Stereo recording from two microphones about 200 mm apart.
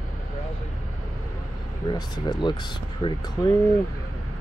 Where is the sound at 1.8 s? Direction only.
20° left (ahead or behind).